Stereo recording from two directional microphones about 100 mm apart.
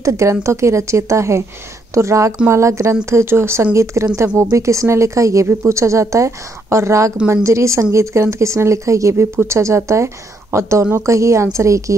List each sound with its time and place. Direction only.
0.0 s a woman's voice: 30° right (ahead or behind)